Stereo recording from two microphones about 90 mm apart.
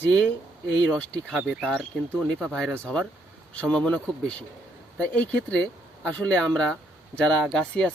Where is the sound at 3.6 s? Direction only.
15° left (ahead or behind).